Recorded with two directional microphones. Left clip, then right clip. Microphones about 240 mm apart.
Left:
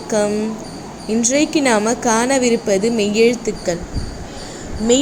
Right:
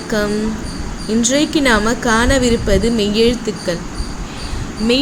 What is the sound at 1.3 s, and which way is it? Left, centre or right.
Speech, right.